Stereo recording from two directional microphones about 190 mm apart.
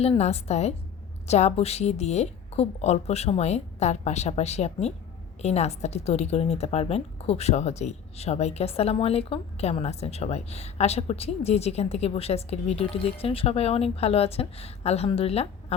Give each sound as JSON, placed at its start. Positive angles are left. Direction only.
{"t": 0.0, "sound": "a woman's voice", "side_deg": 35}